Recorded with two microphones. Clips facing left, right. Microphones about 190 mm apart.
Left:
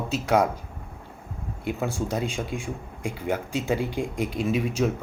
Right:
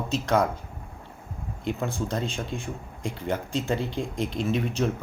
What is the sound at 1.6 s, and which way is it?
Speech, 10° left (ahead or behind).